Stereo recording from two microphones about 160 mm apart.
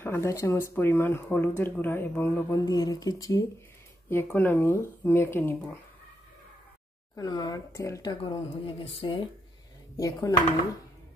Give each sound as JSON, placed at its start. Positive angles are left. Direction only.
{"t": 0.0, "sound": "speech", "side_deg": 15}
{"t": 7.2, "sound": "speech", "side_deg": 25}
{"t": 9.9, "sound": "speech", "side_deg": 20}